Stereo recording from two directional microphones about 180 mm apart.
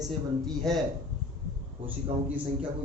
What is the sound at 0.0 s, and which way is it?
Speech, centre (ahead or behind).